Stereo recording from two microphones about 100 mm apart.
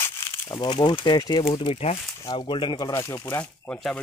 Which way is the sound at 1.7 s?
85° left.